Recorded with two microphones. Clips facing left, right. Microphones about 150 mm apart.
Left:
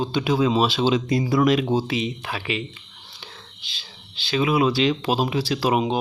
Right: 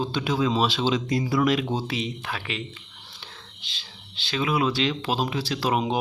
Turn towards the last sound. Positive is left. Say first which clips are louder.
# left 4 dB
turn(degrees=10)  # may be behind; listen again after turning